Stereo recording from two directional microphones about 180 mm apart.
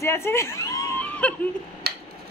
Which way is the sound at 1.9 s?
60° right (ahead or behind).